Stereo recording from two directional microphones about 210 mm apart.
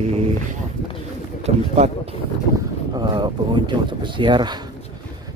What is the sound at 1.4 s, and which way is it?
Speech, 30° right (ahead or behind).